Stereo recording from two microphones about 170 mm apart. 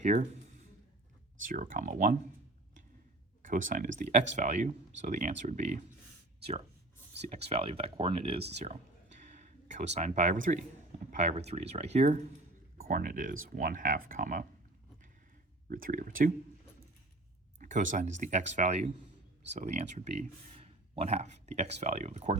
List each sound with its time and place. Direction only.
0.0 s speech: 45° right (ahead or behind)
1.5 s speech: 50° right (ahead or behind)
3.4 s speech: 50° right (ahead or behind)
7.2 s speech: 40° right (ahead or behind)
9.3 s a sound: 45° right (ahead or behind)
11.1 s speech: 40° right (ahead or behind)
12.8 s speech: 50° right (ahead or behind)
15.7 s speech: 55° right (ahead or behind)
17.6 s speech: 50° right (ahead or behind)